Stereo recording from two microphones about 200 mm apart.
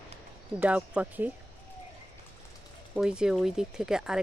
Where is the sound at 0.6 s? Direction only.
10° right (ahead or behind).